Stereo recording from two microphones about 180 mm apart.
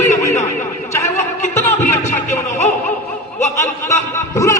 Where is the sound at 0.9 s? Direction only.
15° left (ahead or behind).